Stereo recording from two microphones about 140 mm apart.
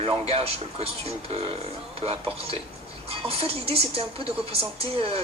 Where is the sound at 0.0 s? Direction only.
45° right (ahead or behind).